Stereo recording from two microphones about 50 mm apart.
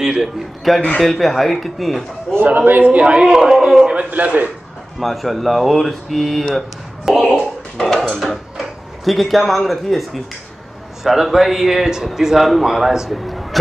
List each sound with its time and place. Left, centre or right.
0.0 s a man's voice: centre
0.9 s a man's voice: centre
2.4 s a man's voice: right
2.8 s a man's voice: right
3.2 s a man's voice: centre
3.8 s a man's voice: right
5.0 s a man's voice: centre
13.2 s a sound: centre